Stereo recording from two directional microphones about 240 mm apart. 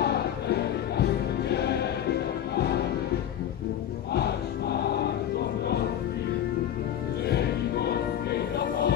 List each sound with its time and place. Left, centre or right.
0.0 s music: left
4.1 s choir: left
7.2 s music: left